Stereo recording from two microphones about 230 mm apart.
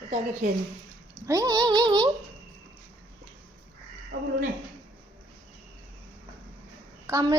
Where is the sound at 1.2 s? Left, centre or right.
Centre.